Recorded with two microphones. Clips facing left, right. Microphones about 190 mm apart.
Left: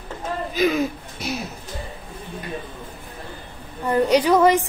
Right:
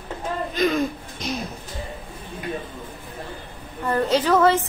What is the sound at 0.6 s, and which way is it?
Hoot, 5° left (ahead or behind).